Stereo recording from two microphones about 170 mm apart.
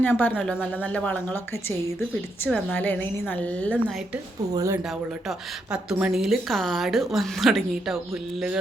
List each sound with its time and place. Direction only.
0.0 s a woman's voice: 10° left (ahead or behind)
2.7 s a woman's voice: 10° left (ahead or behind)
4.5 s speech: 20° right (ahead or behind)
5.7 s a woman's voice: 5° right (ahead or behind)